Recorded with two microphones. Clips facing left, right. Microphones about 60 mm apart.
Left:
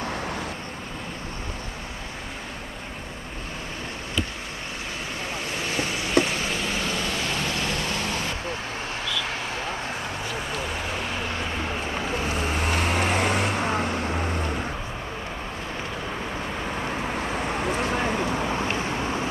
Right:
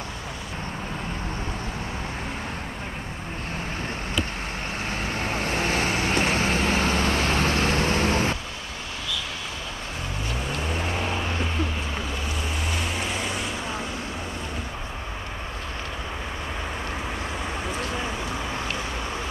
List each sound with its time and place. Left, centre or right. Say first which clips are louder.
5.2 s vehicle: right 5 dB; right
12.6 s vehicle: left 6 dB; left